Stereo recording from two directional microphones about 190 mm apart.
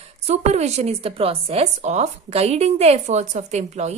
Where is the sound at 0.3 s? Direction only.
35° right (ahead or behind).